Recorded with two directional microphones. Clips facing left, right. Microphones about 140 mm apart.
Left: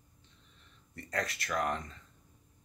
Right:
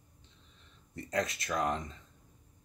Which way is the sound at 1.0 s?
20° right (ahead or behind).